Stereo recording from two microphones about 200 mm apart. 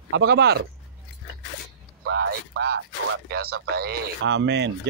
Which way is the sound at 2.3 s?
55° right (ahead or behind).